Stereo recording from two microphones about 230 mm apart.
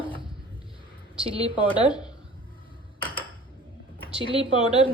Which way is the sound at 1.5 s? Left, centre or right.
Left.